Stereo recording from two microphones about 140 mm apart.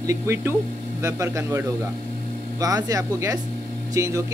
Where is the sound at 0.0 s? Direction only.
20° right (ahead or behind).